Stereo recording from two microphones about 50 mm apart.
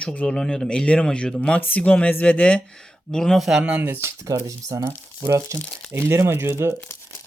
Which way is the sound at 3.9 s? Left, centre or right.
Right.